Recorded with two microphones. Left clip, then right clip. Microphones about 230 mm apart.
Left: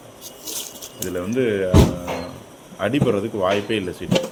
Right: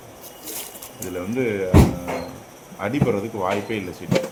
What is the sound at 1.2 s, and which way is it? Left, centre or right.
Speech, centre.